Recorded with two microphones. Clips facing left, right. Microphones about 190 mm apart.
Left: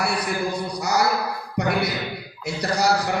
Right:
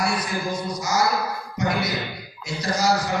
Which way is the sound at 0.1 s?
65° left (ahead or behind).